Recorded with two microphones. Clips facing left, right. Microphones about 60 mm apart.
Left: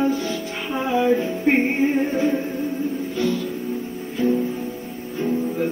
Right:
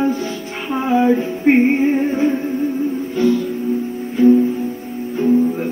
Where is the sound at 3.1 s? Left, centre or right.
Right.